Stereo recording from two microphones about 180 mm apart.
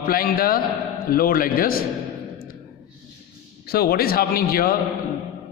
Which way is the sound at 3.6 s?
60° left (ahead or behind).